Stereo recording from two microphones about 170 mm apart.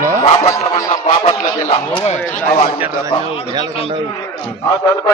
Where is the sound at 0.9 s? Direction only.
45° left (ahead or behind).